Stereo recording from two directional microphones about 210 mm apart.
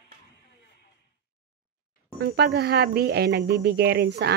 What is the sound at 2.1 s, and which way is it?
A woman's voice, 50° right (ahead or behind).